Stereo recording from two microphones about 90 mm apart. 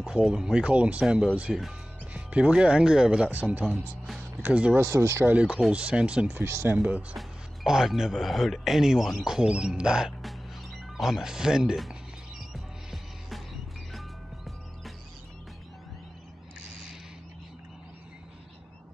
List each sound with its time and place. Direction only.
0.0 s speech: 10° right (ahead or behind)
3.6 s speech: centre (ahead or behind)
4.4 s speech: 15° right (ahead or behind)
4.7 s speech: 30° right (ahead or behind)
5.3 s speech: 15° right (ahead or behind)
6.8 s speech: 15° right (ahead or behind)
11.0 s music: 5° right (ahead or behind)